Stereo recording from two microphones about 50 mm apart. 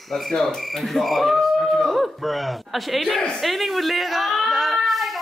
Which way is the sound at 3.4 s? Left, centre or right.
Centre.